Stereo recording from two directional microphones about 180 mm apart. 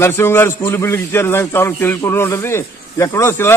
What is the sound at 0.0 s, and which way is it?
A man's voice, 15° left (ahead or behind).